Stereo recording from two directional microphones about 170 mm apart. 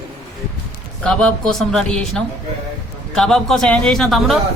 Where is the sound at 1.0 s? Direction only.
5° left (ahead or behind).